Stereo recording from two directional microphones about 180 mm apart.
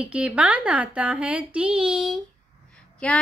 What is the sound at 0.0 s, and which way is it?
A child's voice, 5° right (ahead or behind).